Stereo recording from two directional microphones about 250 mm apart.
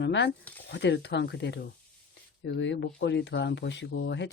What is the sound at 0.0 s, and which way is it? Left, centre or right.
Speech, left.